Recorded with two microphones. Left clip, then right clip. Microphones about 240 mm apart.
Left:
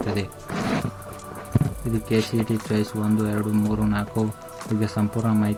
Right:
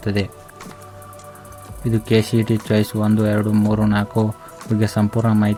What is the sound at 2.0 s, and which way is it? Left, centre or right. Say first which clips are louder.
Speech: right 6 dB; right.